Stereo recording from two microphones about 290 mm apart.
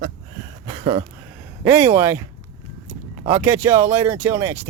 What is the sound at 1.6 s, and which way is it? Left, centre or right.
Speech, centre.